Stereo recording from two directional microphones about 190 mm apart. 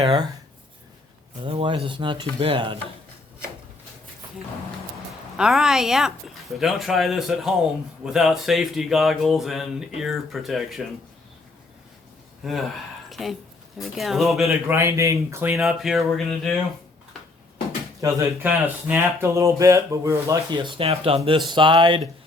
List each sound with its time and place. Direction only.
0.0 s speech: 30° right (ahead or behind)
1.4 s speech: 30° right (ahead or behind)
5.4 s speech: centre (ahead or behind)
12.4 s speech: centre (ahead or behind)
14.7 s speech: 15° right (ahead or behind)
15.5 s speech: centre (ahead or behind)
18.0 s speech: 15° right (ahead or behind)